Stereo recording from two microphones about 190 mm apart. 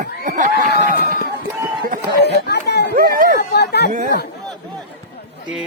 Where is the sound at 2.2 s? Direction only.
60° left (ahead or behind).